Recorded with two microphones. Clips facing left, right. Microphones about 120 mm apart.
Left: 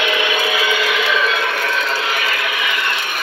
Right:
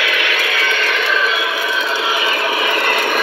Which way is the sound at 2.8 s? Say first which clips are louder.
Right 6 dB; 50° right (ahead or behind).